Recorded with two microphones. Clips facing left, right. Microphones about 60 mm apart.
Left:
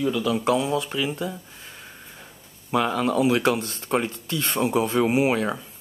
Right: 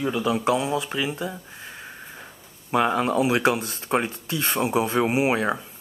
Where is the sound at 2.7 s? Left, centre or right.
Centre.